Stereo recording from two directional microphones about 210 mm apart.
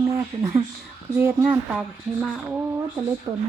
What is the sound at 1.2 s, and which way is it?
Speech, 10° right (ahead or behind).